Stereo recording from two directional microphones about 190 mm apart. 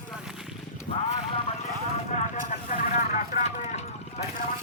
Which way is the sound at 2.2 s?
40° left (ahead or behind).